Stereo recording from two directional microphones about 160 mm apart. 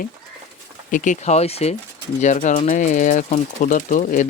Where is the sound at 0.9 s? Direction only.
55° left (ahead or behind).